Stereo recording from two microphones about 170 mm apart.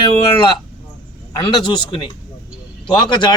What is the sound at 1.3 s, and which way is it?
Speech, 25° left (ahead or behind).